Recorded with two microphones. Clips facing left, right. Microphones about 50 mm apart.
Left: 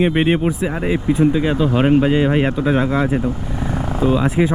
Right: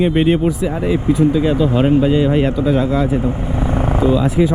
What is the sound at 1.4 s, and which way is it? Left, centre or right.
Speech, centre.